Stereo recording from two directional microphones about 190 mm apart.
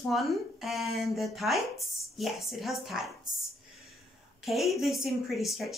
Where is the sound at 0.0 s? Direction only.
Centre (ahead or behind).